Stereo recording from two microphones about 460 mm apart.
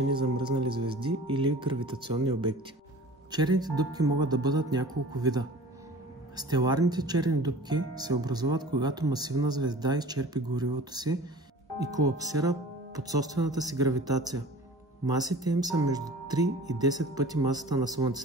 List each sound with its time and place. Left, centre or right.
0.1 s speech: centre
3.3 s speech: centre